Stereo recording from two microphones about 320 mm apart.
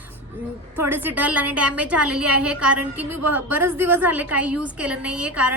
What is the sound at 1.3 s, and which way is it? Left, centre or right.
A woman's voice, right.